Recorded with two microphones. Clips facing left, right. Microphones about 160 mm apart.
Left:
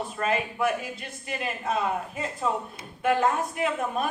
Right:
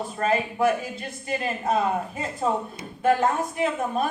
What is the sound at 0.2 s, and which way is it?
A woman's voice, 35° right (ahead or behind).